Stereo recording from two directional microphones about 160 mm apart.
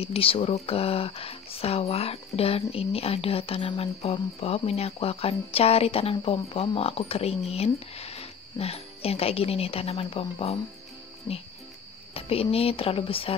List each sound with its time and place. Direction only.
0.0 s speech: 35° left (ahead or behind)
12.1 s speech: 35° left (ahead or behind)